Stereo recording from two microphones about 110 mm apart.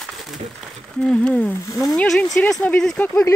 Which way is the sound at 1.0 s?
10° left (ahead or behind).